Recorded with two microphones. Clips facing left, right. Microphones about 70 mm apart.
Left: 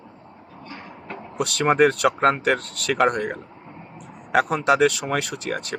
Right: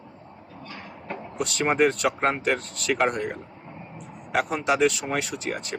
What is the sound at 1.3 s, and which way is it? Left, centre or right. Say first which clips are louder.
Speech: left 4 dB; left.